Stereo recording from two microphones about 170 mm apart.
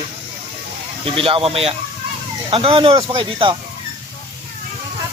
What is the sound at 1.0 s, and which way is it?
Speech, 30° right (ahead or behind).